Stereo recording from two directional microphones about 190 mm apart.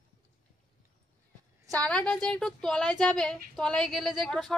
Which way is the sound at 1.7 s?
5° left (ahead or behind).